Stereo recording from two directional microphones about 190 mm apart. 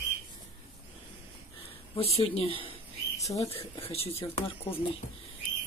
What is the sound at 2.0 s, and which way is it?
Speech, 30° left (ahead or behind).